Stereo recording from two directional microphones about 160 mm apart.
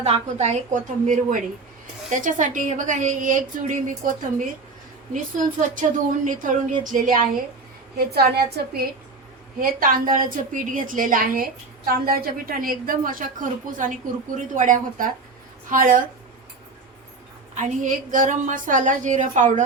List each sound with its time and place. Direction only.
0.0 s a woman's voice: 45° right (ahead or behind)
7.9 s a woman's voice: 75° right (ahead or behind)
9.6 s a woman's voice: 60° right (ahead or behind)
17.5 s a woman's voice: 50° right (ahead or behind)